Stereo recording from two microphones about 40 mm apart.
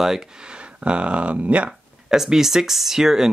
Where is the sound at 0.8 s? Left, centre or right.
Right.